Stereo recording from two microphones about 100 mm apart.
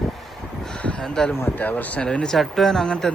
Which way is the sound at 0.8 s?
10° left (ahead or behind).